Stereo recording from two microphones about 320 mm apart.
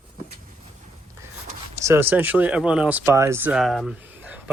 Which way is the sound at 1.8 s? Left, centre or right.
Centre.